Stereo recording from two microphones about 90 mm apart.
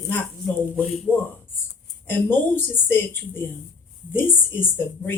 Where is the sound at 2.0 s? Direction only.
20° left (ahead or behind).